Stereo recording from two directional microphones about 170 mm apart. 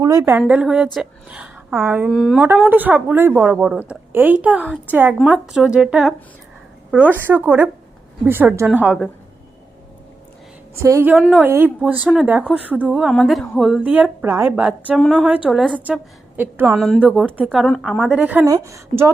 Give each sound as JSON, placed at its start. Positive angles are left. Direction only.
{"t": 0.0, "sound": "a woman's voice", "side_deg": -20}
{"t": 0.3, "sound": "a woman's voice", "side_deg": -5}
{"t": 10.8, "sound": "a woman's voice", "side_deg": -15}
{"t": 11.1, "sound": "a woman's voice", "side_deg": -5}
{"t": 13.1, "sound": "a woman's voice", "side_deg": 5}
{"t": 15.0, "sound": "a woman's voice", "side_deg": 5}
{"t": 16.8, "sound": "a woman's voice", "side_deg": 0}
{"t": 18.4, "sound": "a woman's voice", "side_deg": -20}